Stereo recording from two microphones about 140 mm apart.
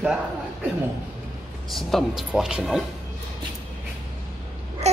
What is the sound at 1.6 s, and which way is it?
Speech, centre (ahead or behind).